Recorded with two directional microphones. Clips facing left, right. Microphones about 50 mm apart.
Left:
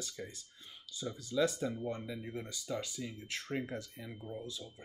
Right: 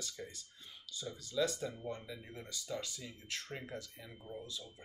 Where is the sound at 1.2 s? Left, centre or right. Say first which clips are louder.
Left 3 dB; left.